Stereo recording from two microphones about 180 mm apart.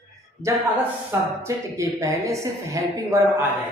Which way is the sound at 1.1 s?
15° right (ahead or behind).